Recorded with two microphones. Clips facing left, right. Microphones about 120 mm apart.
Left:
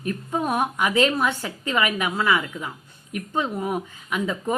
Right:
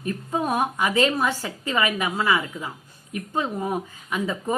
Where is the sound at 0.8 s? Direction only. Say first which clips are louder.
Left 1 dB; 35° right (ahead or behind).